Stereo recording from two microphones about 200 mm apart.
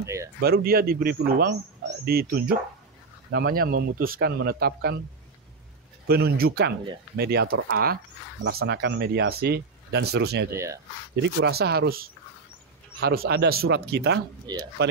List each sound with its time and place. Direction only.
0.0 s speech: 15° right (ahead or behind)
0.4 s a man's voice: 50° right (ahead or behind)
6.0 s a man's voice: 50° right (ahead or behind)
10.5 s speech: 15° right (ahead or behind)
11.2 s a man's voice: 55° right (ahead or behind)
14.5 s speech: 20° right (ahead or behind)